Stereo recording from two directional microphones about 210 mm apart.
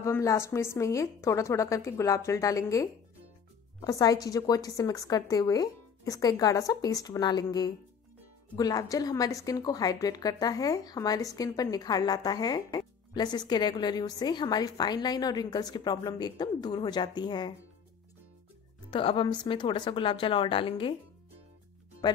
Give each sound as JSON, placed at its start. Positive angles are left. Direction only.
{"t": 0.0, "sound": "a woman's voice", "side_deg": 15}
{"t": 18.9, "sound": "a woman's voice", "side_deg": 25}